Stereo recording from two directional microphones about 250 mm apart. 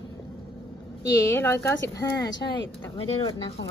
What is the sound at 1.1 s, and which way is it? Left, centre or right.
A woman's voice, centre.